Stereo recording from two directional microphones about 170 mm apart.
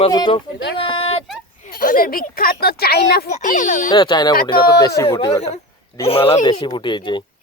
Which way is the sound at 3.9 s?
25° left (ahead or behind).